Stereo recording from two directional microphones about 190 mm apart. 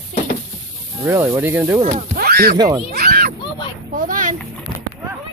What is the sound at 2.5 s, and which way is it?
Speech, 20° right (ahead or behind).